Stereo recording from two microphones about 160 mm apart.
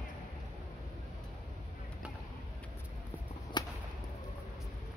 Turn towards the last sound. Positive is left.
turn(degrees=25)  # may be behind; listen again after turning